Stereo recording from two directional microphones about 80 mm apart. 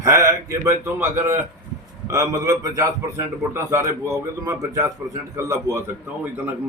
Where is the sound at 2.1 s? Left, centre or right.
Right.